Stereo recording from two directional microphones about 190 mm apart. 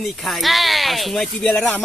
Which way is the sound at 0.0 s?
Centre (ahead or behind).